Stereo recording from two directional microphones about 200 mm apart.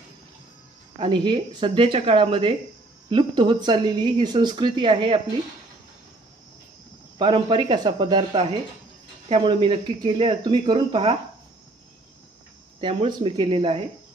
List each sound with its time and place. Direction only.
0.9 s speech: 25° right (ahead or behind)
7.2 s speech: 25° right (ahead or behind)
12.8 s speech: 25° right (ahead or behind)